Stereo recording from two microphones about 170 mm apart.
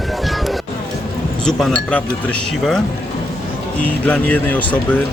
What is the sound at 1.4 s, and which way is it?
Speech, 5° left (ahead or behind).